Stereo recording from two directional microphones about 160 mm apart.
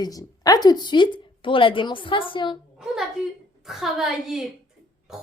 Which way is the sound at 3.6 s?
Centre (ahead or behind).